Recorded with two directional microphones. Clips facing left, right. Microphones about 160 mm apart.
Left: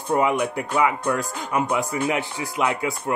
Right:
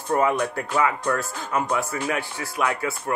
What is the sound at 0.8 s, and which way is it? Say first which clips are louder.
Speech: left 1 dB; 15° left (ahead or behind).